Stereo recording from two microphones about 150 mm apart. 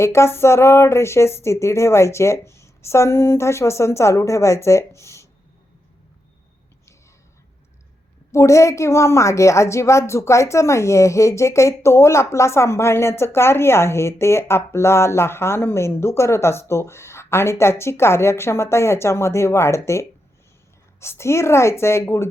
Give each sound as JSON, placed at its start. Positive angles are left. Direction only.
{"t": 0.0, "sound": "a woman's voice", "side_deg": 20}
{"t": 8.3, "sound": "a woman's voice", "side_deg": 20}